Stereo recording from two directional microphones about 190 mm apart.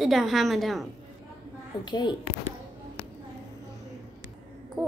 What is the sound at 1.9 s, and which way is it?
Speech, 25° left (ahead or behind).